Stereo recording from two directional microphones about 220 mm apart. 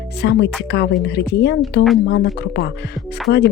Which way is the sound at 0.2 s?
50° left (ahead or behind).